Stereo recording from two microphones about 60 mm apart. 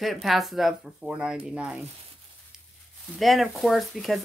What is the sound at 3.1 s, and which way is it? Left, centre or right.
Speech, centre.